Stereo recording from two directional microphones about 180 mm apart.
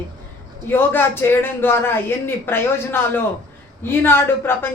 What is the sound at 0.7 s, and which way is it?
A man's voice, 10° left (ahead or behind).